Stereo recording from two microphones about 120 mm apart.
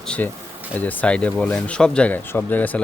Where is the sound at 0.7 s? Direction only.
15° left (ahead or behind).